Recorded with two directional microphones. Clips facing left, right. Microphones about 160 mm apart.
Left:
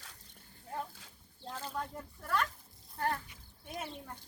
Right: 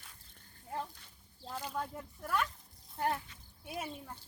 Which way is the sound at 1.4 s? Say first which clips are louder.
Right 1 dB; 10° right (ahead or behind).